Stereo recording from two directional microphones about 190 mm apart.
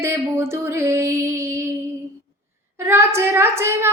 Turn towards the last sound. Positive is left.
turn(degrees=-15)  # may be behind; listen again after turning